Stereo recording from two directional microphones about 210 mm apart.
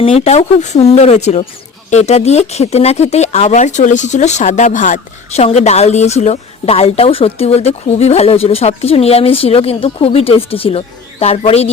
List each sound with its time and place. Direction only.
0.0 s speech: 30° left (ahead or behind)